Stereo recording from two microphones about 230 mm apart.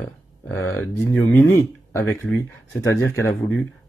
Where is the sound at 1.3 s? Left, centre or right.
Centre.